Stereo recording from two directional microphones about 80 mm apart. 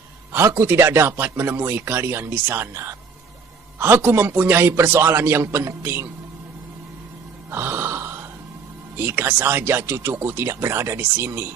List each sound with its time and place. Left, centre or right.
0.3 s a man's voice: right
7.5 s a sound: right
8.9 s a man's voice: right